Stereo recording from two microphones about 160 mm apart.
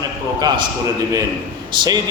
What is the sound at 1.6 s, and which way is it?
Speech, 25° right (ahead or behind).